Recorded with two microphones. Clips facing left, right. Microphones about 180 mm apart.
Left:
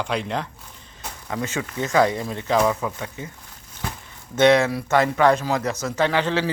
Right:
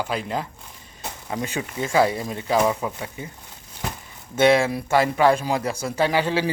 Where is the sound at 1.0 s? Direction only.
15° right (ahead or behind).